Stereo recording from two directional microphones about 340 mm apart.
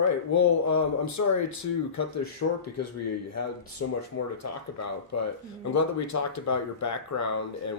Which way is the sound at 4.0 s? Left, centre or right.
Left.